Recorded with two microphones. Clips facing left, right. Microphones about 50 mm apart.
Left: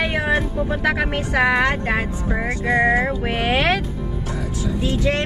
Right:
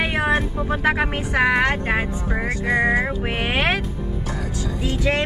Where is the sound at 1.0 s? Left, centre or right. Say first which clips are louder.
Left 1 dB; centre.